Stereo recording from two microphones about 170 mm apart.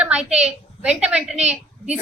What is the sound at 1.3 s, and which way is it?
Speech, 40° right (ahead or behind).